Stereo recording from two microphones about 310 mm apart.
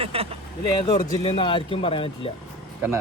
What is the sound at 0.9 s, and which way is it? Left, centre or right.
Speech, centre.